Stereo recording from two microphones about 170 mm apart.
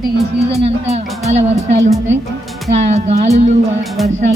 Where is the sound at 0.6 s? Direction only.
40° right (ahead or behind).